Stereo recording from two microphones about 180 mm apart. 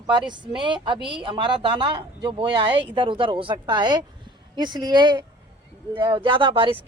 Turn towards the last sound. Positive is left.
turn(degrees=-30)  # may be behind; listen again after turning